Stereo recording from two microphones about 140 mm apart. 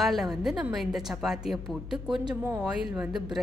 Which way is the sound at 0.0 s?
Centre (ahead or behind).